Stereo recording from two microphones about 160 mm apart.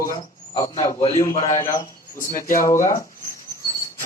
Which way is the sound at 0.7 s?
45° left (ahead or behind).